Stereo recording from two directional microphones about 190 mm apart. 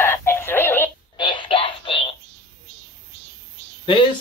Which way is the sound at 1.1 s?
25° left (ahead or behind).